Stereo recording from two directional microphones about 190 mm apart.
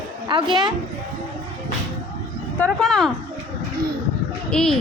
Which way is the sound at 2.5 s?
5° left (ahead or behind).